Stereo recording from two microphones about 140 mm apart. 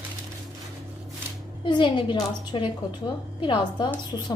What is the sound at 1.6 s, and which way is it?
A woman's voice, 35° left (ahead or behind).